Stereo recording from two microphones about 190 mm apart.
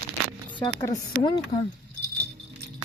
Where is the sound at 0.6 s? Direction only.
20° left (ahead or behind).